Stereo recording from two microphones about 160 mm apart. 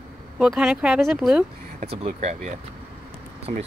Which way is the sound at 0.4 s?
5° right (ahead or behind).